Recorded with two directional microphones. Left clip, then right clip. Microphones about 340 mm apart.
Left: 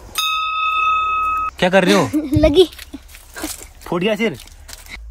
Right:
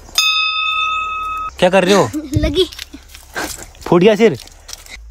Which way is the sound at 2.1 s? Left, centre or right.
Centre.